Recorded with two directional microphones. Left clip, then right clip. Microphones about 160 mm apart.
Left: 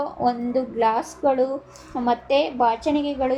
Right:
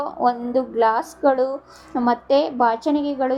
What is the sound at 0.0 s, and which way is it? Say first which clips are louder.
A woman's voice: right 2 dB; 15° right (ahead or behind).